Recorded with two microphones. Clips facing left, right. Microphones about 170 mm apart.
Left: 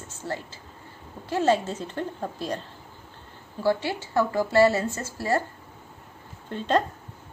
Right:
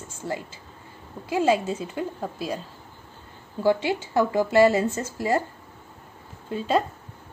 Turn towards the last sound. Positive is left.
turn(degrees=-5)  # may be behind; listen again after turning